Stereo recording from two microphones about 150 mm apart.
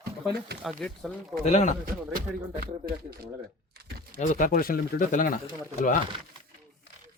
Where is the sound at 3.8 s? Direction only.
90° right.